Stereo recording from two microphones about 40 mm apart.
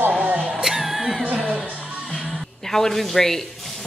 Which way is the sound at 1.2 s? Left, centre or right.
Right.